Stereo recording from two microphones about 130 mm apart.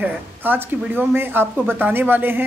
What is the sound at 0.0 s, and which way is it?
Speech, 15° right (ahead or behind).